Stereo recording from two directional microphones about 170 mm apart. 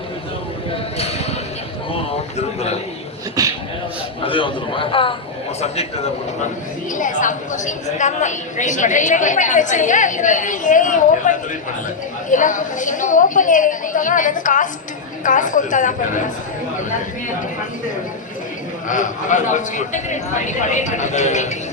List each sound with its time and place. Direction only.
3.4 s a man's voice: 20° right (ahead or behind)
4.2 s a man's voice: 30° left (ahead or behind)
6.9 s a woman's voice: 50° left (ahead or behind)
18.9 s a woman's voice: 50° left (ahead or behind)